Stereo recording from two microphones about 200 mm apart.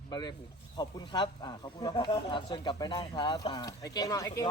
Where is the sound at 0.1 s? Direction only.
20° left (ahead or behind).